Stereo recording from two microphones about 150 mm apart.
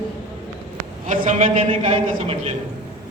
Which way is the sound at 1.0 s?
55° right (ahead or behind).